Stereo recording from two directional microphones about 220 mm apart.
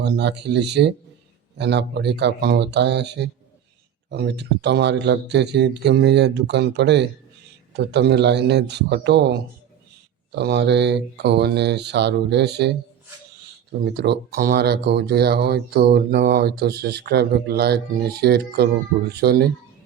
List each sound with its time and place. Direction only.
0.0 s speech: 50° right (ahead or behind)
10.3 s speech: 50° right (ahead or behind)
13.9 s speech: 50° right (ahead or behind)